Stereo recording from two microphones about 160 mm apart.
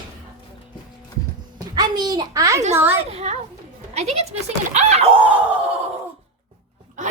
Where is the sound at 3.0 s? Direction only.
40° right (ahead or behind).